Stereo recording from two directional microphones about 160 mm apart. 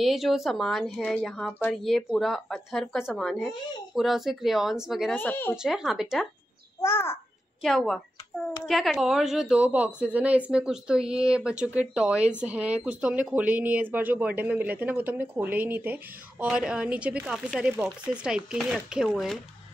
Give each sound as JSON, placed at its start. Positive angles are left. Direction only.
{"t": 0.0, "sound": "speech", "side_deg": 0}
{"t": 5.1, "sound": "speech", "side_deg": 10}
{"t": 5.6, "sound": "speech", "side_deg": -5}
{"t": 6.8, "sound": "a child's voice", "side_deg": 15}
{"t": 7.6, "sound": "a woman's voice", "side_deg": 5}